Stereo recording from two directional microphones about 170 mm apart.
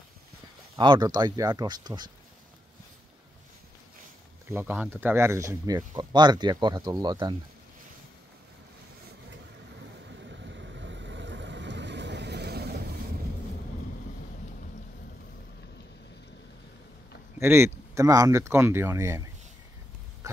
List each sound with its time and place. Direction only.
0.7 s speech: 25° right (ahead or behind)
4.5 s speech: 15° right (ahead or behind)
10.0 s vehicle: 90° right; by 12.8 s 70° right (ahead or behind)
17.4 s speech: 15° right (ahead or behind)